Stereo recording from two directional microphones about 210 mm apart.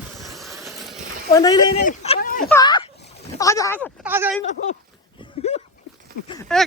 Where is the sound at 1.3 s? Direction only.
20° left (ahead or behind).